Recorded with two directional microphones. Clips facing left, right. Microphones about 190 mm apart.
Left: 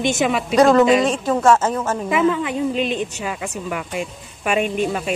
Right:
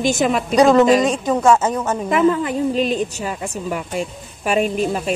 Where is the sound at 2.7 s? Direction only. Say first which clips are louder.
Right 3 dB; 40° right (ahead or behind).